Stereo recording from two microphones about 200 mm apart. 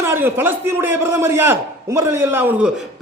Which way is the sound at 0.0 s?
10° right (ahead or behind).